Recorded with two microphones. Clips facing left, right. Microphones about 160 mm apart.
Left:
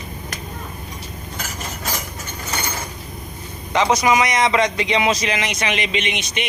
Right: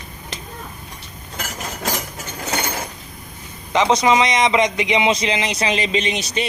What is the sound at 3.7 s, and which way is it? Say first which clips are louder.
A man's voice: right 1 dB; 25° right (ahead or behind).